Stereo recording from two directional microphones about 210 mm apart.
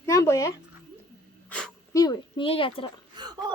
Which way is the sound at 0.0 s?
15° left (ahead or behind).